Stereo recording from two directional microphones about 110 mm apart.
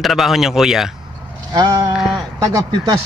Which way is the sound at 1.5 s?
35° right (ahead or behind).